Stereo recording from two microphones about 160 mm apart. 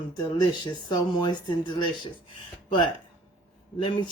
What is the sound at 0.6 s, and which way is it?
Speech, 25° left (ahead or behind).